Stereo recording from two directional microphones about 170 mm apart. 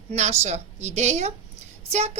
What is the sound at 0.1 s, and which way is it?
A woman's voice, 40° right (ahead or behind).